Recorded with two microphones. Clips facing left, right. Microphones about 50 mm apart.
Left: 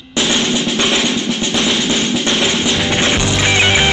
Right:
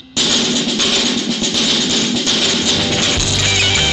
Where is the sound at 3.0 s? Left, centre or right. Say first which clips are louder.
Left 3 dB; left.